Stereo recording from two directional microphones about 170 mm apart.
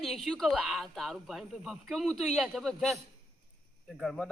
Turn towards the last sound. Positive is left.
turn(degrees=0)  # may be behind; listen again after turning